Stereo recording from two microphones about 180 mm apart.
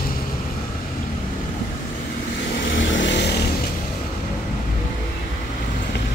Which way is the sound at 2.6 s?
90° left.